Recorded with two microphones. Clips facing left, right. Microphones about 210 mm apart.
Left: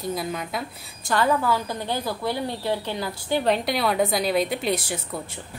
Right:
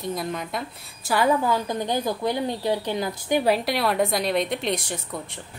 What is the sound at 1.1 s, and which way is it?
A woman's voice, 15° right (ahead or behind).